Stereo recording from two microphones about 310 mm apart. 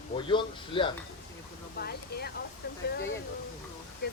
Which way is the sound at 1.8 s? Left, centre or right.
Left.